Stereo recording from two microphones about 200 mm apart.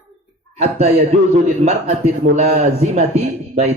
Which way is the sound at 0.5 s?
35° right (ahead or behind).